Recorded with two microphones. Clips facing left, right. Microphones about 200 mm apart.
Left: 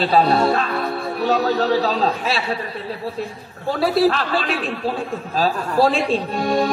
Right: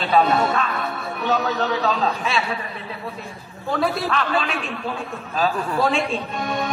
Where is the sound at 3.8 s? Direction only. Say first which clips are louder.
Left 7 dB; 35° left (ahead or behind).